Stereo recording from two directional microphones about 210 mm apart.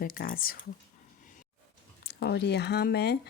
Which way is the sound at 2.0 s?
50° left (ahead or behind).